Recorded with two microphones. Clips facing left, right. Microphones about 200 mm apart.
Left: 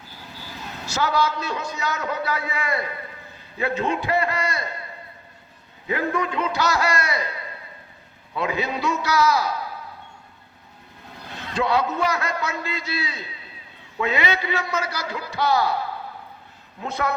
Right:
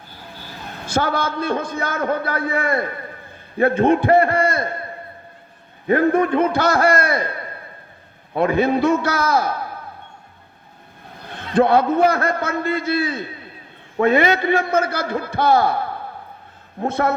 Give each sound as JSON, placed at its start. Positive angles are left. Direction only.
{"t": 0.9, "sound": "a man's voice", "side_deg": -50}
{"t": 5.9, "sound": "a man's voice", "side_deg": -55}
{"t": 11.3, "sound": "a man's voice", "side_deg": -55}